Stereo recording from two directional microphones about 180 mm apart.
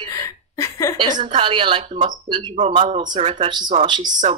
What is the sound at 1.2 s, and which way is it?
Speech, 30° right (ahead or behind).